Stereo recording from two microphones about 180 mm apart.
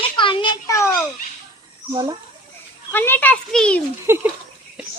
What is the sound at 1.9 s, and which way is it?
Speech, 20° right (ahead or behind).